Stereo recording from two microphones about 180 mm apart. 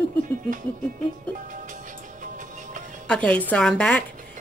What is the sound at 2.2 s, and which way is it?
Music, 45° right (ahead or behind).